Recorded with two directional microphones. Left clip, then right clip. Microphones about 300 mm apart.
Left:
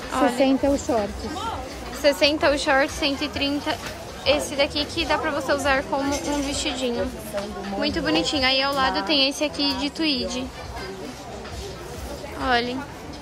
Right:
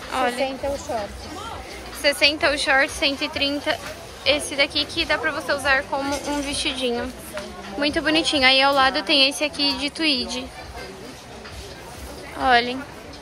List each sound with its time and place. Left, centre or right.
0.1 s a sound: centre
0.4 s a woman's voice: left
2.0 s a woman's voice: centre
12.4 s a woman's voice: centre